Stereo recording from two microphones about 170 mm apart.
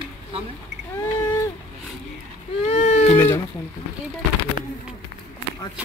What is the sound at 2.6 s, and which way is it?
Baby cry, 35° left (ahead or behind).